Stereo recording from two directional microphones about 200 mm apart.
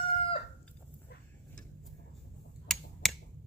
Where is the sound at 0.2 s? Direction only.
30° left (ahead or behind).